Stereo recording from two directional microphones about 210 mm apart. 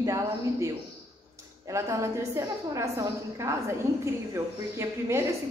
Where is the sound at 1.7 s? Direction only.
15° right (ahead or behind).